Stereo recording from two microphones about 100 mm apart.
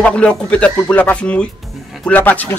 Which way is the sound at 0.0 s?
10° left (ahead or behind).